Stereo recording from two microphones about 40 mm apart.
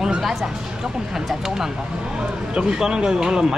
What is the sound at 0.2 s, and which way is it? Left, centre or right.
Speech, centre.